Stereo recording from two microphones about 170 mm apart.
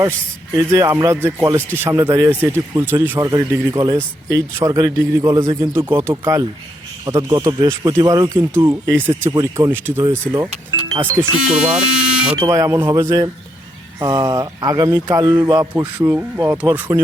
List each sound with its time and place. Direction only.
0.5 s speech: 15° right (ahead or behind)
11.3 s speech: 5° right (ahead or behind)
12.5 s speech: 20° right (ahead or behind)
15.7 s speech: 10° right (ahead or behind)